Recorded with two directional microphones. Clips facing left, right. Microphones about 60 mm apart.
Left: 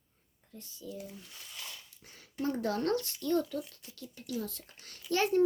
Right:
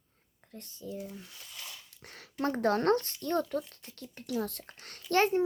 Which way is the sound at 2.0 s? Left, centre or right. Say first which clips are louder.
Right 4 dB; right.